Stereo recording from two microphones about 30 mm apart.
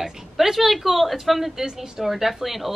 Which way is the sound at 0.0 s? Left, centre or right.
Centre.